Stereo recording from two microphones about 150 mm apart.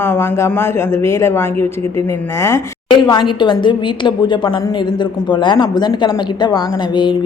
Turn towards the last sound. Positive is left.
turn(degrees=30)  # may be behind; listen again after turning